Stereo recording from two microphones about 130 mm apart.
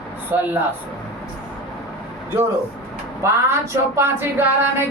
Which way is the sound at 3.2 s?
20° right (ahead or behind).